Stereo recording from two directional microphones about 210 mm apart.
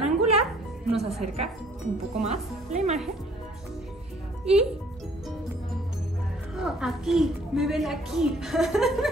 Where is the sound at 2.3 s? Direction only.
30° right (ahead or behind).